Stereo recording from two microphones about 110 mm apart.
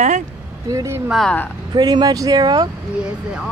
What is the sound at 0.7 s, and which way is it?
Frog, 30° right (ahead or behind).